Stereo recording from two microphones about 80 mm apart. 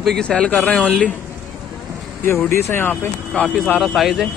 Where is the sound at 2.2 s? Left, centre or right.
Left.